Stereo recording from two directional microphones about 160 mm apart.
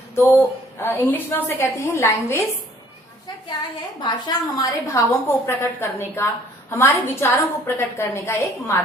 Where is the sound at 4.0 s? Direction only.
25° left (ahead or behind).